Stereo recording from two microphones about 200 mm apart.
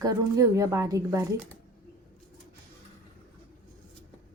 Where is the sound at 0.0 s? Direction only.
15° right (ahead or behind).